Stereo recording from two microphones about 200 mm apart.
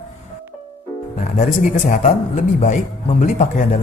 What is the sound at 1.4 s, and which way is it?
Speech, 40° left (ahead or behind).